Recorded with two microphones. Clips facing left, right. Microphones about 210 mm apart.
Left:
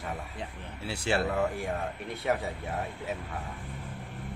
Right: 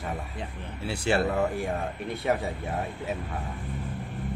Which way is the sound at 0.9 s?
55° right (ahead or behind).